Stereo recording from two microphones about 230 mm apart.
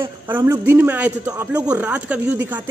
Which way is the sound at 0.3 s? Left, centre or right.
Centre.